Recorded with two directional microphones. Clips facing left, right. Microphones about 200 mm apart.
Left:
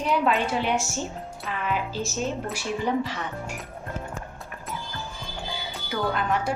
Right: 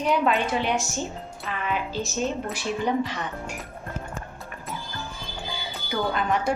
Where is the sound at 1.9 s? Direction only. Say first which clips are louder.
Right 1 dB; 10° left (ahead or behind).